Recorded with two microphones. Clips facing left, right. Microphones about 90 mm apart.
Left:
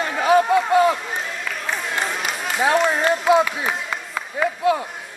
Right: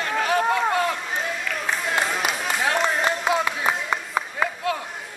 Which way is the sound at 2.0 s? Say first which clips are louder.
Right 1 dB; centre (ahead or behind).